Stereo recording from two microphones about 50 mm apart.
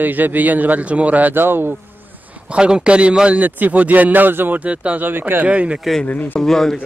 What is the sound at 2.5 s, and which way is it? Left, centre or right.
Speech, centre.